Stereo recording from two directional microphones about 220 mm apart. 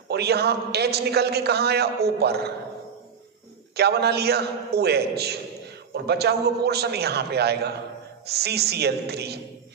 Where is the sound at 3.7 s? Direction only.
45° right (ahead or behind).